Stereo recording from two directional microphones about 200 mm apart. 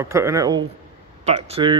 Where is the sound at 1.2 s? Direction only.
30° right (ahead or behind).